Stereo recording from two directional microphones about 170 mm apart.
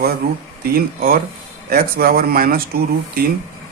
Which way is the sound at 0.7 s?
60° right (ahead or behind).